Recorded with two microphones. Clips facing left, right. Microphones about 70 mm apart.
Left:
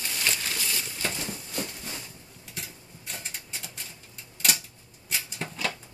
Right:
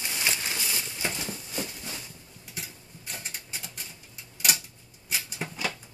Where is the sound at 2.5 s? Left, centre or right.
Centre.